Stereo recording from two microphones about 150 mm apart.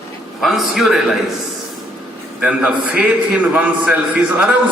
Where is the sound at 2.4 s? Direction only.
5° right (ahead or behind).